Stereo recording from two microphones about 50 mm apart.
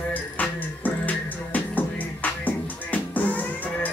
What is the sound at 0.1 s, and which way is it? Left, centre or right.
Music, left.